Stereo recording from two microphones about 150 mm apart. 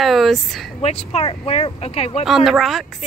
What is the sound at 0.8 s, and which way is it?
Speech, 45° left (ahead or behind).